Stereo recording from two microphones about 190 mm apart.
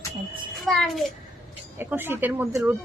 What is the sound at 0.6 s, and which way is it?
Speech, centre (ahead or behind).